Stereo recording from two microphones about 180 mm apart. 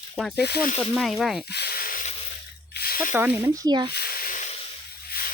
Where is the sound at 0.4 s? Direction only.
60° left (ahead or behind).